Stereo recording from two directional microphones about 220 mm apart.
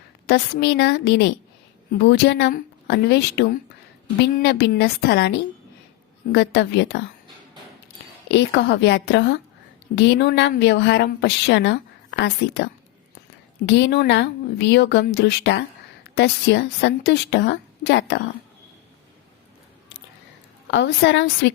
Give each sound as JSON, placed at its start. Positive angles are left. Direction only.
{"t": 0.3, "sound": "a woman's voice", "side_deg": 45}
{"t": 6.3, "sound": "a woman's voice", "side_deg": 50}
{"t": 8.3, "sound": "a woman's voice", "side_deg": 55}
{"t": 13.7, "sound": "a woman's voice", "side_deg": 50}
{"t": 20.7, "sound": "a woman's voice", "side_deg": 55}